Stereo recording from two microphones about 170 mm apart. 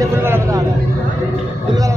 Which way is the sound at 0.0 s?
15° right (ahead or behind).